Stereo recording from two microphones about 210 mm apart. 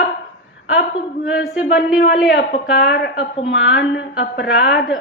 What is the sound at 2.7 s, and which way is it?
A woman's voice, 50° left (ahead or behind).